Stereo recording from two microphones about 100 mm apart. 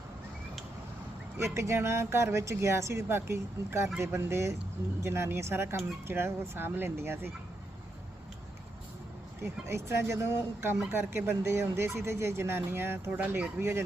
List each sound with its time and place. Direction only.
1.5 s speech: 30° right (ahead or behind)
9.4 s speech: 25° right (ahead or behind)